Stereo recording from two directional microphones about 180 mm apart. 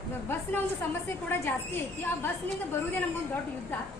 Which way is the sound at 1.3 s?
10° left (ahead or behind).